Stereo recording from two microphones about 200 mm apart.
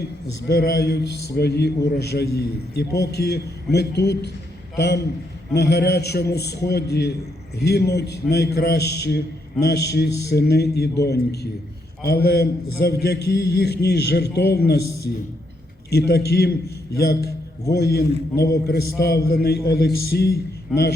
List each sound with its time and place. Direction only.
0.4 s a man's voice: 55° left (ahead or behind)